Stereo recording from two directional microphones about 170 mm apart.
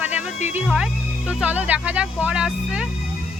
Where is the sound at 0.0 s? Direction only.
10° right (ahead or behind).